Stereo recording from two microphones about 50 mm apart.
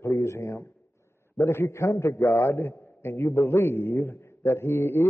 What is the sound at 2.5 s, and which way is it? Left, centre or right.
A man's voice, left.